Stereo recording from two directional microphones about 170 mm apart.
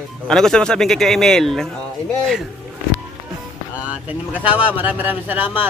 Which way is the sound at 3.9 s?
10° right (ahead or behind).